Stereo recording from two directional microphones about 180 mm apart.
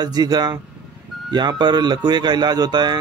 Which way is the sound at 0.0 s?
20° right (ahead or behind).